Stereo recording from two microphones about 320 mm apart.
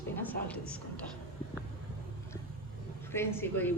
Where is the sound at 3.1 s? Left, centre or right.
Centre.